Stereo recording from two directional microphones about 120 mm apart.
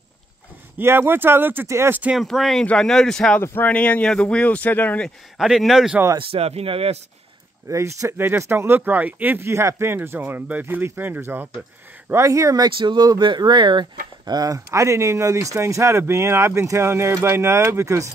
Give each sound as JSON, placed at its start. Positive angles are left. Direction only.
{"t": 0.7, "sound": "speech", "side_deg": -20}
{"t": 2.1, "sound": "speech", "side_deg": 0}
{"t": 3.3, "sound": "speech", "side_deg": 15}
{"t": 5.4, "sound": "speech", "side_deg": -5}
{"t": 6.1, "sound": "speech", "side_deg": -55}
{"t": 7.6, "sound": "speech", "side_deg": -25}